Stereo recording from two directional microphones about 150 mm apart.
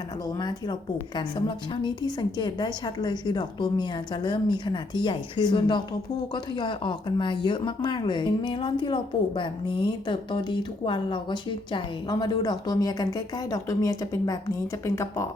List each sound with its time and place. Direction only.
0.3 s a woman's voice: 30° left (ahead or behind)